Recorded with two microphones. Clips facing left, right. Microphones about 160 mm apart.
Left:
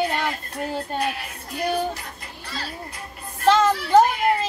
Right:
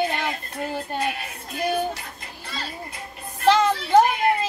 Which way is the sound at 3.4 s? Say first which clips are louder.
Left 1 dB; 20° right (ahead or behind).